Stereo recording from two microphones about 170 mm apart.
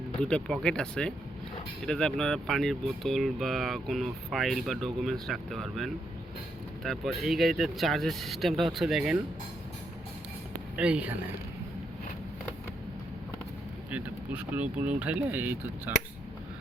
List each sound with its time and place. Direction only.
0.2 s speech: 5° left (ahead or behind)
10.8 s speech: 5° right (ahead or behind)
13.9 s speech: 10° right (ahead or behind)